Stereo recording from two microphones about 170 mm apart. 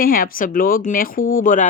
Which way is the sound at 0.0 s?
55° left (ahead or behind).